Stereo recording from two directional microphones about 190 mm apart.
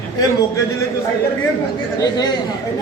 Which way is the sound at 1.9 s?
20° left (ahead or behind).